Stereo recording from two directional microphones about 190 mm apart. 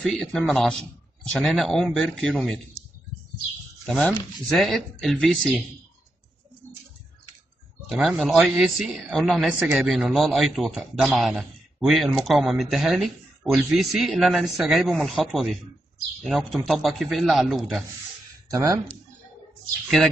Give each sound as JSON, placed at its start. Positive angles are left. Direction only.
{"t": 0.0, "sound": "speech", "side_deg": 0}
{"t": 3.8, "sound": "speech", "side_deg": 0}
{"t": 7.9, "sound": "speech", "side_deg": -5}
{"t": 18.5, "sound": "speech", "side_deg": -15}